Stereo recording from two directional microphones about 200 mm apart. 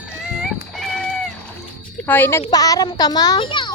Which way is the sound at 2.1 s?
10° left (ahead or behind).